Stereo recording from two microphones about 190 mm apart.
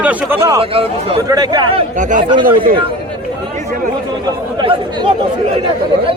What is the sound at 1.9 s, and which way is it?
Speech, 45° right (ahead or behind).